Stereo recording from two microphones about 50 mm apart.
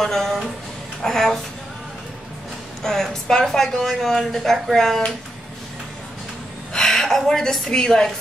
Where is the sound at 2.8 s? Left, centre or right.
Centre.